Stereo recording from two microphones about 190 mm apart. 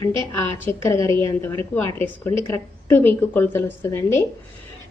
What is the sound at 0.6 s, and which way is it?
A woman's voice, 15° left (ahead or behind).